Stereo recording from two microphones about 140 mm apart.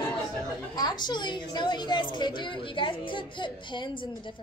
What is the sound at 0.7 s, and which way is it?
A woman's voice, 30° left (ahead or behind).